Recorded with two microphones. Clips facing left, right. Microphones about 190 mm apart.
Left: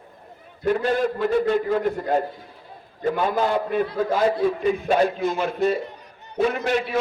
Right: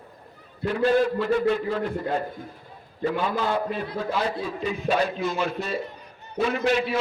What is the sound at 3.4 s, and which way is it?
A man's voice, 50° left (ahead or behind).